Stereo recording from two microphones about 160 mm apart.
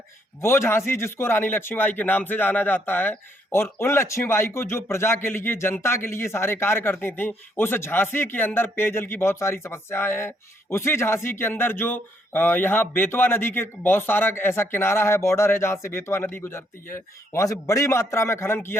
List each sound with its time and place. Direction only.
0.4 s a man's voice: 15° left (ahead or behind)